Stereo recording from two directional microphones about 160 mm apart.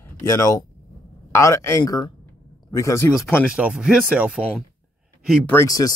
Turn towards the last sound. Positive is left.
turn(degrees=20)  # may be behind; listen again after turning